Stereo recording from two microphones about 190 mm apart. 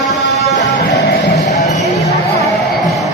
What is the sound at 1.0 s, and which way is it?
Music, 60° left (ahead or behind).